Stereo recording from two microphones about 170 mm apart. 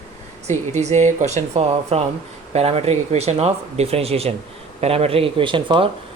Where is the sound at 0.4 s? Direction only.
40° right (ahead or behind).